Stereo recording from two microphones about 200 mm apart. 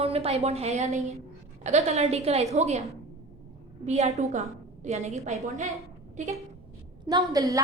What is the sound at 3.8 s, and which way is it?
A woman's voice, 35° right (ahead or behind).